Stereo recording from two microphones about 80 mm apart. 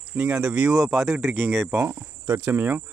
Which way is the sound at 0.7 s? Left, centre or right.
Centre.